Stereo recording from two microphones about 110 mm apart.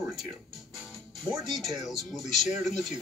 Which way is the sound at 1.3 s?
Centre (ahead or behind).